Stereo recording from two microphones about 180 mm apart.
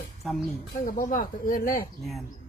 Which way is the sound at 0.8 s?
50° left (ahead or behind).